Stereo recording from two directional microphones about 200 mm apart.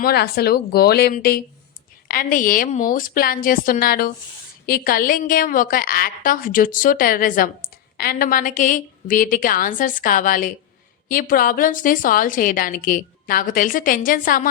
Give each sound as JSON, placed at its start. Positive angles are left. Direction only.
{"t": 0.0, "sound": "a woman's voice", "side_deg": 50}